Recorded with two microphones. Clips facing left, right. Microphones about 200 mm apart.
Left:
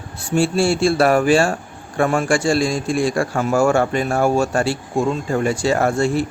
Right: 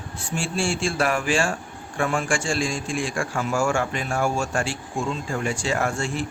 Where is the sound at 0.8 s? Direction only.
35° left (ahead or behind).